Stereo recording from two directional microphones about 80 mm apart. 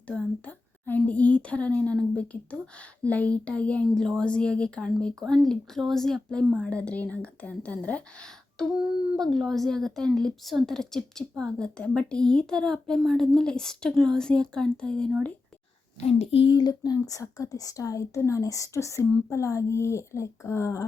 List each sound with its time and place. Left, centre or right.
0.1 s a woman's voice: centre
16.4 s speech: left